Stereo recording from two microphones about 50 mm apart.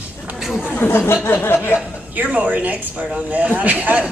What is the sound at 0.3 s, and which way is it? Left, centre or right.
Chatter, centre.